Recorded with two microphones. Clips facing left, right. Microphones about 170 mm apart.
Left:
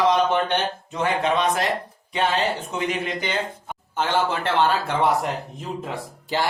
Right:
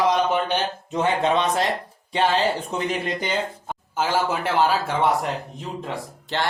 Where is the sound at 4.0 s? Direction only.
5° right (ahead or behind).